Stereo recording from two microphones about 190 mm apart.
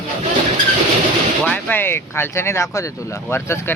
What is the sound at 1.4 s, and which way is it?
Speech, 10° left (ahead or behind).